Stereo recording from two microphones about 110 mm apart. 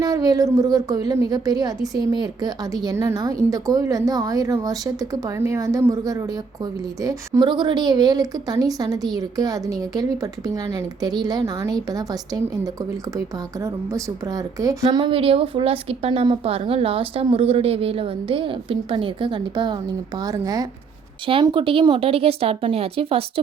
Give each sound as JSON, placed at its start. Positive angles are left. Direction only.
{"t": 0.0, "sound": "a woman's voice", "side_deg": -35}
{"t": 7.4, "sound": "a woman's voice", "side_deg": -45}
{"t": 14.9, "sound": "a woman's voice", "side_deg": -55}
{"t": 21.4, "sound": "a woman's voice", "side_deg": -50}